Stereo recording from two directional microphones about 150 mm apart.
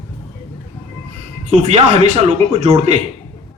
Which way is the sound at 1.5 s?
45° right (ahead or behind).